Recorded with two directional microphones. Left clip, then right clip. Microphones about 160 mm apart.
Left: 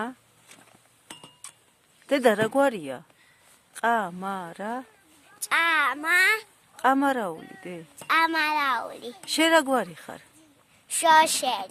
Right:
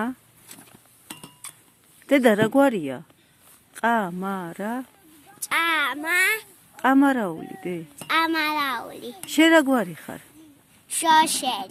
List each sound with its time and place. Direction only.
1.0 s a sound: 35° right (ahead or behind)
2.0 s speech: 5° right (ahead or behind)
5.4 s a woman's voice: 15° left (ahead or behind); by 8.0 s 5° right (ahead or behind)
8.0 s a woman's voice: 10° left (ahead or behind)
9.3 s speech: centre (ahead or behind)
10.8 s a woman's voice: 15° left (ahead or behind)